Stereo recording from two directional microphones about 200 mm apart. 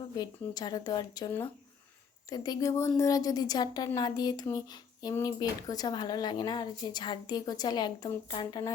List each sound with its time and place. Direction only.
0.2 s speech: 20° left (ahead or behind)
2.3 s speech: 20° left (ahead or behind)